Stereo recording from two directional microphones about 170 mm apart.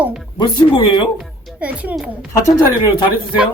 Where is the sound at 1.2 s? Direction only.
5° right (ahead or behind).